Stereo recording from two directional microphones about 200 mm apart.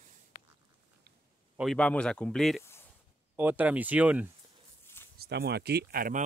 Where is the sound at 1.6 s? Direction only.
5° left (ahead or behind).